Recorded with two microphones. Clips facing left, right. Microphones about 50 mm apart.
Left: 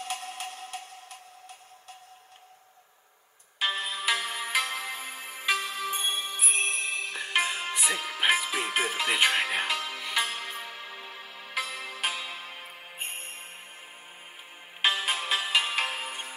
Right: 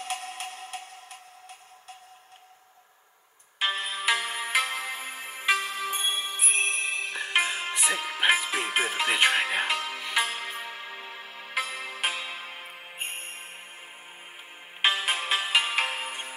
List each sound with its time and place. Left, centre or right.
0.0 s music: centre
3.5 s music: centre
14.8 s music: centre